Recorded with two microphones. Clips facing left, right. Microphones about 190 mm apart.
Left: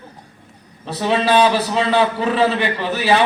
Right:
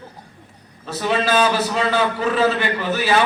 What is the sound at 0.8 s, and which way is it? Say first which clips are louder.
A man's voice: left 2 dB; 30° left (ahead or behind).